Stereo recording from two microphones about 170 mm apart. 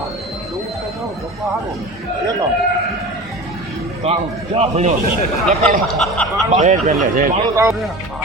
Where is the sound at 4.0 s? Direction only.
35° right (ahead or behind).